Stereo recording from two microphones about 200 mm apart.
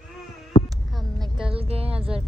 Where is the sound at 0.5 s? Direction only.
40° left (ahead or behind).